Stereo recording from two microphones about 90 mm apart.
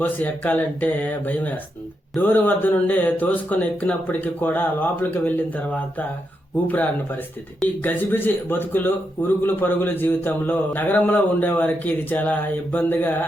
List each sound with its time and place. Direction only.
0.0 s a man's voice: 20° left (ahead or behind)
6.7 s a man's voice: 20° left (ahead or behind)